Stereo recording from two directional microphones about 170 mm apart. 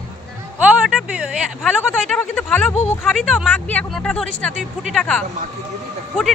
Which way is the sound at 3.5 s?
10° left (ahead or behind).